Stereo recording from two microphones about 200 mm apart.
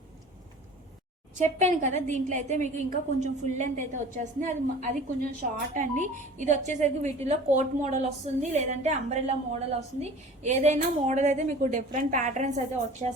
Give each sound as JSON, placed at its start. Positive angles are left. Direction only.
{"t": 1.4, "sound": "speech", "side_deg": -40}